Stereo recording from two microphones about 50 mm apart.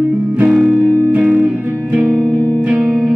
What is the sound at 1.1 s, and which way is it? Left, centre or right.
Music, right.